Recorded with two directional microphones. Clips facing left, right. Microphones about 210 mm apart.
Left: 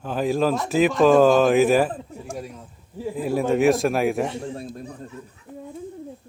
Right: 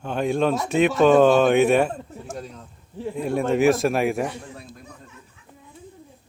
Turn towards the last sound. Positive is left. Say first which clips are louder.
# left 8 dB
turn(degrees=35)  # may be behind; listen again after turning